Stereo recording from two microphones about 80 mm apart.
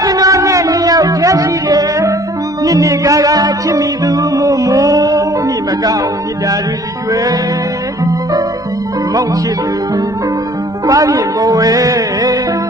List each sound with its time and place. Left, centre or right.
0.0 s music: right
10.8 s music: right